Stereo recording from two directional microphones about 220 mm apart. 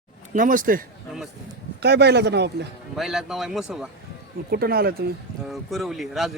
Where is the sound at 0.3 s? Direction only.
35° right (ahead or behind).